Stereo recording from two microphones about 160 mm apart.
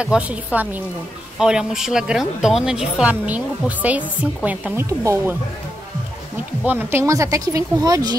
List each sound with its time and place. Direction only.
0.0 s a woman's voice: 5° right (ahead or behind)
6.6 s speech: 10° right (ahead or behind)